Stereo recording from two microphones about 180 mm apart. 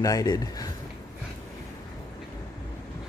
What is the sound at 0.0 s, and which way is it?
Speech, 20° left (ahead or behind).